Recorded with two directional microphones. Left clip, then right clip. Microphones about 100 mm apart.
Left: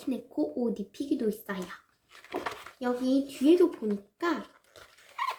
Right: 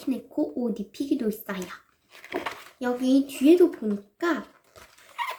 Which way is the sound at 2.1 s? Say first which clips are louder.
Right 3 dB; 30° right (ahead or behind).